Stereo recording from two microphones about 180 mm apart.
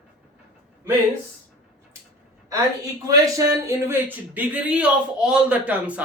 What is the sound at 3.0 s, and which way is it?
Speech, 20° right (ahead or behind).